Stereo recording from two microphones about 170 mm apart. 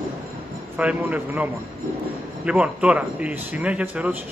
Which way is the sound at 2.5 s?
5° right (ahead or behind).